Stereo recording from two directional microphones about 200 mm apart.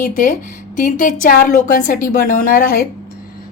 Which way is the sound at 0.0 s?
45° left (ahead or behind).